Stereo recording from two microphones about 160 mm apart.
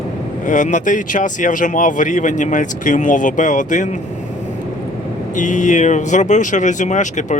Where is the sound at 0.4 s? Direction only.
50° left (ahead or behind).